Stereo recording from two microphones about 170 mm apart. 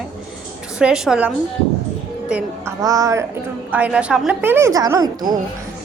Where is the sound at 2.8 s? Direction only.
20° right (ahead or behind).